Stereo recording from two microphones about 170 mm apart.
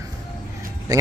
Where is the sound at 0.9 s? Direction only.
20° right (ahead or behind).